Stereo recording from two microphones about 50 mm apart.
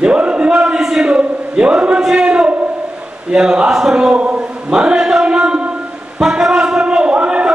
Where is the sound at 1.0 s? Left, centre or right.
Centre.